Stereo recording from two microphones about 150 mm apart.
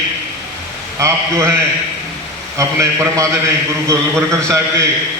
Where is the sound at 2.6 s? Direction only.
20° right (ahead or behind).